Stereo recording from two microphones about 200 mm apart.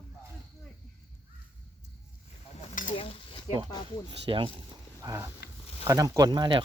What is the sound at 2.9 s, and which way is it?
Stir, 25° left (ahead or behind).